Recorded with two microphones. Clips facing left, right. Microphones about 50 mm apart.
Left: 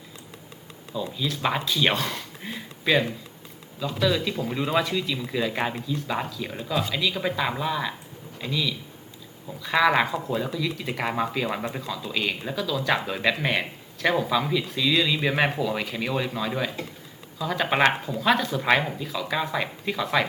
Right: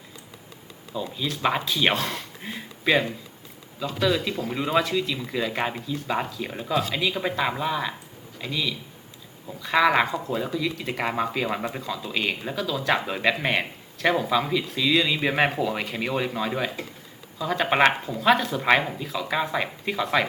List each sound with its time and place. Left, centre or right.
0.9 s speech: centre